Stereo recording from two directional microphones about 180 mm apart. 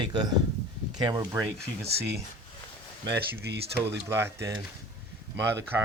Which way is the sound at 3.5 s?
70° right (ahead or behind).